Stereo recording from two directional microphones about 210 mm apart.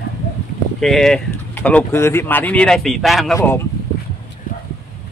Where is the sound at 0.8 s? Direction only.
Centre (ahead or behind).